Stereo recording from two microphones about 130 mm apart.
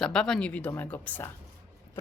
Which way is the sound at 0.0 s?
5° left (ahead or behind).